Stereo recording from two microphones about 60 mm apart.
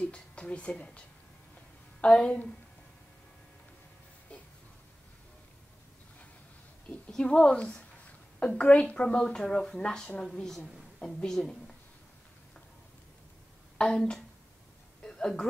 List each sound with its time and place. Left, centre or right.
0.0 s speech: centre
7.1 s a woman's voice: centre
13.7 s a woman's voice: centre
15.0 s a sound: centre